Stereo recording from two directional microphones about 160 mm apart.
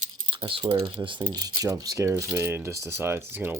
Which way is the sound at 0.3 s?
35° right (ahead or behind).